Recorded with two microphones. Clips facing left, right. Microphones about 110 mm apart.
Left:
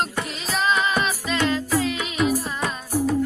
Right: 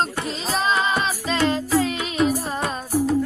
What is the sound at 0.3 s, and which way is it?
Music, 30° right (ahead or behind).